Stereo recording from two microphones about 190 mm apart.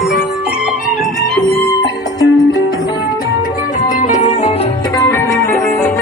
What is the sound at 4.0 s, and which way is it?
Music, 40° left (ahead or behind).